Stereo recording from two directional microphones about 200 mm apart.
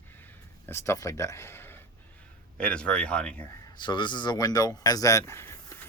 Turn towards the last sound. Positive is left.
turn(degrees=15)  # may be behind; listen again after turning